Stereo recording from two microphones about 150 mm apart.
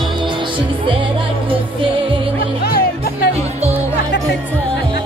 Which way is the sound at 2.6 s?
90° left.